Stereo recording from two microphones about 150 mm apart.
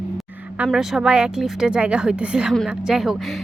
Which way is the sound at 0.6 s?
5° right (ahead or behind).